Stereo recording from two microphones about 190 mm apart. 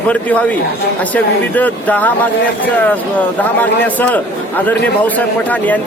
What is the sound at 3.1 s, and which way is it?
Speech, 10° left (ahead or behind).